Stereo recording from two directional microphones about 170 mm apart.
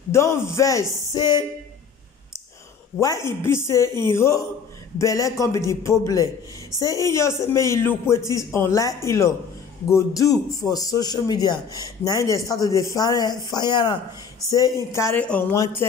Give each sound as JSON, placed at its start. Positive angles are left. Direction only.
{"t": 0.1, "sound": "speech", "side_deg": 15}
{"t": 3.0, "sound": "speech", "side_deg": 20}